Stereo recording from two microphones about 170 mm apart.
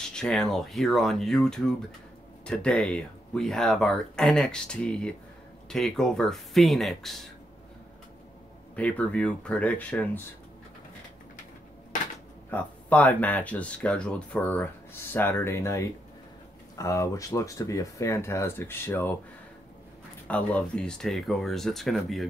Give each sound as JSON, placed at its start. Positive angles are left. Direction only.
{"t": 0.1, "sound": "speech", "side_deg": 5}
{"t": 8.7, "sound": "speech", "side_deg": 10}
{"t": 12.4, "sound": "speech", "side_deg": 10}
{"t": 20.2, "sound": "speech", "side_deg": 10}